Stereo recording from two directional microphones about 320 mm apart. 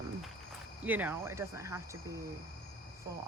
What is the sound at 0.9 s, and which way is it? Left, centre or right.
Speech, centre.